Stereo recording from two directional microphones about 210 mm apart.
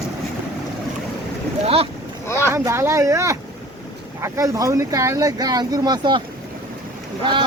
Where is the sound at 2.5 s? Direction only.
15° right (ahead or behind).